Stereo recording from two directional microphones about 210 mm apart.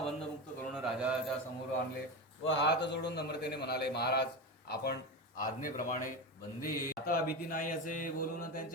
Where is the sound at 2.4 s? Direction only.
60° left (ahead or behind).